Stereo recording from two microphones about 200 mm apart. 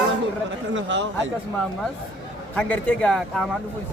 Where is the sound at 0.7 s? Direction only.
65° right (ahead or behind).